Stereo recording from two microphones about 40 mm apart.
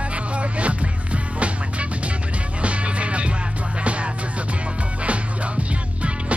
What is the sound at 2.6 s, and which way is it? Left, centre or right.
Music, right.